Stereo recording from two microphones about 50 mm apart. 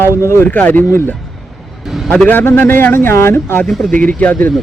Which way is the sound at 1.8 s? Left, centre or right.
Centre.